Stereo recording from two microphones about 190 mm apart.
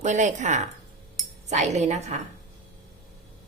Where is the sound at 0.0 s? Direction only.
40° right (ahead or behind).